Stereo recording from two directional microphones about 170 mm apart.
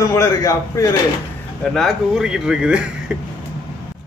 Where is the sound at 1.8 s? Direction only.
Centre (ahead or behind).